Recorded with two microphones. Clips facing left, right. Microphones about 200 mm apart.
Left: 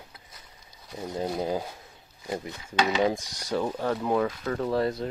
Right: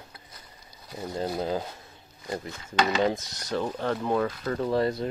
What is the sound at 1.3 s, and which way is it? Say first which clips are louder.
Speech: even; 10° left (ahead or behind).